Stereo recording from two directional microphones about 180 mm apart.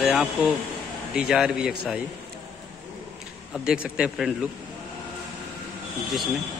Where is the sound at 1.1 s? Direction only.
5° right (ahead or behind).